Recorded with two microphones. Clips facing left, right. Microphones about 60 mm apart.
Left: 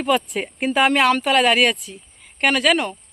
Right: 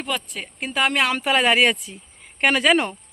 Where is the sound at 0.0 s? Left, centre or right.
Centre.